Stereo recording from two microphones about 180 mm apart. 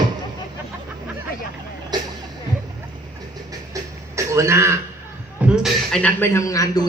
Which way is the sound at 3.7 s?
20° right (ahead or behind).